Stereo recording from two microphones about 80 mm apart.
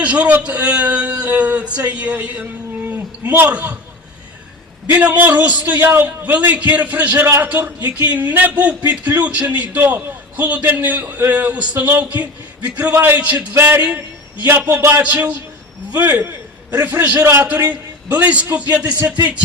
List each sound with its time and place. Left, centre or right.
0.0 s a man's voice: centre
4.9 s a man's voice: right